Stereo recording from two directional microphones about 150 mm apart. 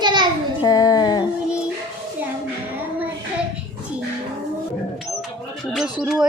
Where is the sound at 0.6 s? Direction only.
25° left (ahead or behind).